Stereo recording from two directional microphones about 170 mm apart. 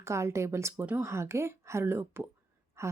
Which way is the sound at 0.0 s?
15° right (ahead or behind).